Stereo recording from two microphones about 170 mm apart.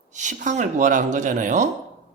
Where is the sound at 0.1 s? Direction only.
45° right (ahead or behind).